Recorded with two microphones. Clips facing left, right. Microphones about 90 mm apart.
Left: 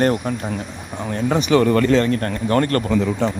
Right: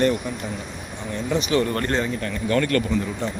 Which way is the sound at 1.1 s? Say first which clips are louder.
Left 5 dB; 80° left.